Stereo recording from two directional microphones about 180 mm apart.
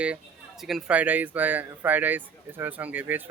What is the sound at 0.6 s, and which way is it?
Speech, centre (ahead or behind).